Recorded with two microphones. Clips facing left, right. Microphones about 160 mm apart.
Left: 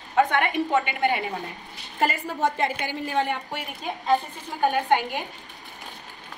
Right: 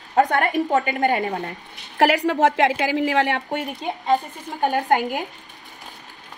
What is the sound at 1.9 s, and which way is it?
A woman's voice, 80° right.